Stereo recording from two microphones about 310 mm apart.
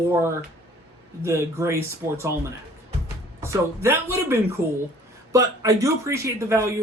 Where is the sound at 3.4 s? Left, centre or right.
Centre.